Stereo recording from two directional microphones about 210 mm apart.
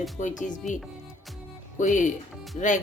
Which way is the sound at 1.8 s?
35° left (ahead or behind).